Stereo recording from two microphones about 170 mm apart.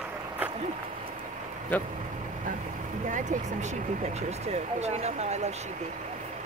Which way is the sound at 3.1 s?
45° right (ahead or behind).